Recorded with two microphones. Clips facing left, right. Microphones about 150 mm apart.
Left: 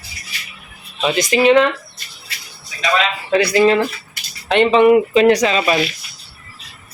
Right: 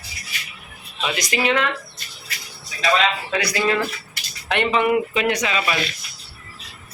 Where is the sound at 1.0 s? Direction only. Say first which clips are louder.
Left 8 dB; 30° left (ahead or behind).